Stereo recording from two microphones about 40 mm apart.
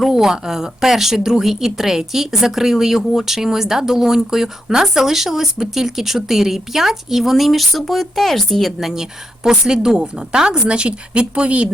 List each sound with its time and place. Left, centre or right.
0.0 s speech: centre
8.9 s speech: centre; by 11.7 s right